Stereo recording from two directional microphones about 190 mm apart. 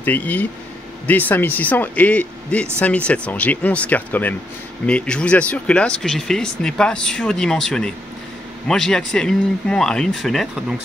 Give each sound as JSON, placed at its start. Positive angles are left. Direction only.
{"t": 0.0, "sound": "speech", "side_deg": 10}